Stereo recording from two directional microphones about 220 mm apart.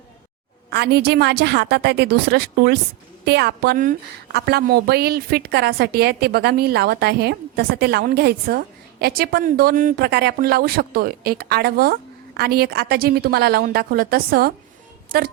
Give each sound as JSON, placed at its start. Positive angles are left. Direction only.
{"t": 0.7, "sound": "a woman's voice", "side_deg": -50}